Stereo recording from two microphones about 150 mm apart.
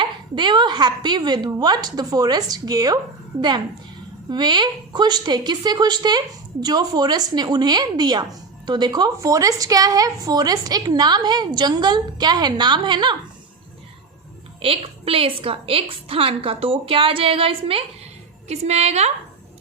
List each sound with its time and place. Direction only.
0.0 s a woman's voice: 30° right (ahead or behind)
4.3 s a woman's voice: 30° right (ahead or behind)
14.6 s a woman's voice: 40° right (ahead or behind)